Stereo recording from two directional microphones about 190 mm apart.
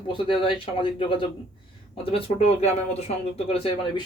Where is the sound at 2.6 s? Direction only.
35° left (ahead or behind).